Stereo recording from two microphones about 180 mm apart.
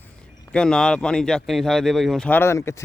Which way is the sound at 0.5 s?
5° left (ahead or behind).